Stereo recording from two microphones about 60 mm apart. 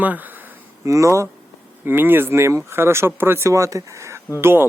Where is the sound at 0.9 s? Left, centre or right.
Right.